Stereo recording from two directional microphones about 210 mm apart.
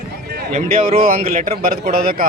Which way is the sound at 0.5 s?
30° right (ahead or behind).